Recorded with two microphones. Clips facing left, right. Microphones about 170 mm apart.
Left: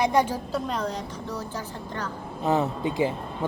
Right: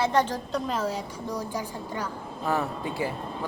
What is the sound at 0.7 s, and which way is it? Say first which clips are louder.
A woman's voice: even; 5° right (ahead or behind).